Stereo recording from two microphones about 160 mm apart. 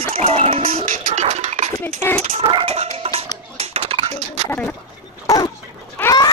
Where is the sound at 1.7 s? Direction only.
15° left (ahead or behind).